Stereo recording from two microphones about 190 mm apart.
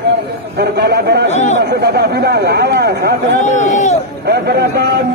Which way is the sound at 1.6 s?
60° right (ahead or behind).